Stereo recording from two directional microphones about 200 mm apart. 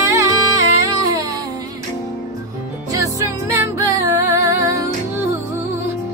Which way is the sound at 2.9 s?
15° right (ahead or behind).